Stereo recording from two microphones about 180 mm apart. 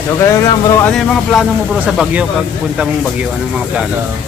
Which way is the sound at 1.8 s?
5° right (ahead or behind).